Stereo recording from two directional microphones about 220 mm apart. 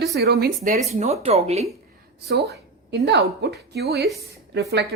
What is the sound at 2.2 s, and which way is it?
A woman's voice, 45° right (ahead or behind).